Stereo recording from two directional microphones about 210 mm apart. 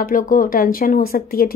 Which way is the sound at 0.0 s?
40° left (ahead or behind).